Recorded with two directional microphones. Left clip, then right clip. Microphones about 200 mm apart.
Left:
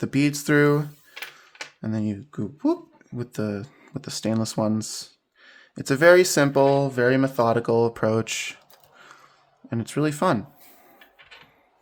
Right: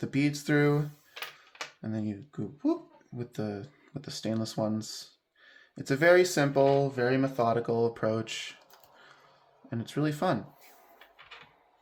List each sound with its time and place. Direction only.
0.0 s speech: 45° left (ahead or behind)
9.6 s a man's voice: 40° left (ahead or behind)